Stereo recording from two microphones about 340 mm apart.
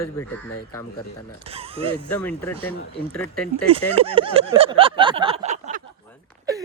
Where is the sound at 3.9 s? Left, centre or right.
Centre.